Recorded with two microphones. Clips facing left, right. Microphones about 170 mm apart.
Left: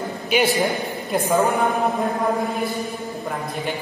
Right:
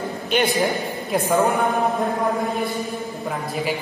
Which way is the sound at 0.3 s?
5° left (ahead or behind).